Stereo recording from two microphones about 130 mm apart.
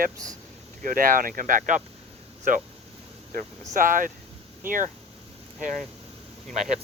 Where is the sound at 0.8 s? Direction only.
90° right.